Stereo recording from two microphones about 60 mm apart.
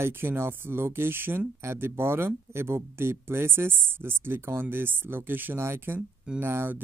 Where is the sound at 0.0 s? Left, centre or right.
Right.